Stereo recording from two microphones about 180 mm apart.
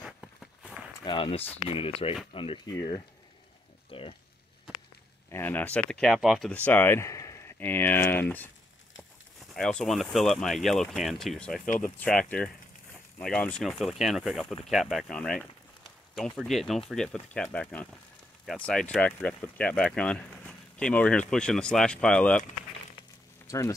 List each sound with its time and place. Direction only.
0.0 s walk: centre (ahead or behind)
1.0 s speech: 30° left (ahead or behind)
5.3 s speech: 10° left (ahead or behind)
9.5 s speech: 5° left (ahead or behind)
23.4 s a sound: 15° left (ahead or behind)